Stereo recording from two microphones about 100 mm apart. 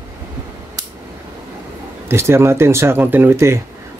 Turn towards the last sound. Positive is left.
turn(degrees=-25)  # may be behind; listen again after turning